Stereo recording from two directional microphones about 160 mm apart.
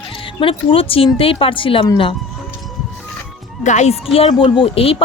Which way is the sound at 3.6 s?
45° left (ahead or behind).